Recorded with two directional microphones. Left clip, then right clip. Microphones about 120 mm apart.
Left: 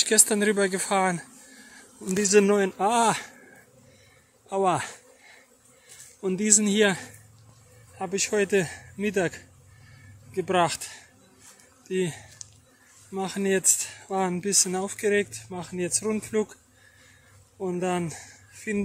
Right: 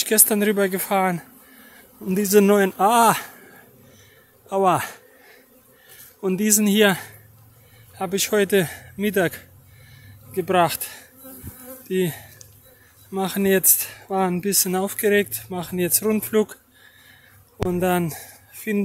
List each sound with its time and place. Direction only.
0.0 s speech: 25° right (ahead or behind)
2.1 s speech: 40° right (ahead or behind)
2.5 s speech: 25° right (ahead or behind)
4.5 s speech: 20° right (ahead or behind)
6.2 s speech: 20° right (ahead or behind)
10.3 s speech: 15° right (ahead or behind); by 16.5 s 45° right (ahead or behind)
17.6 s speech: 45° right (ahead or behind)